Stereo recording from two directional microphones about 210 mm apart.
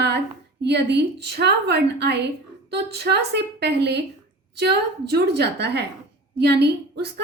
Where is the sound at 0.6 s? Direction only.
55° right (ahead or behind).